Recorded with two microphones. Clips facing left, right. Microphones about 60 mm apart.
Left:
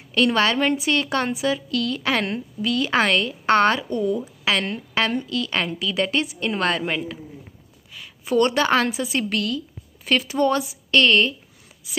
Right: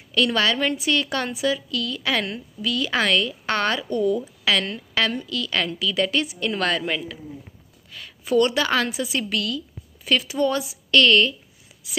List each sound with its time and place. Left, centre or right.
0.1 s a woman's voice: left
8.3 s a woman's voice: left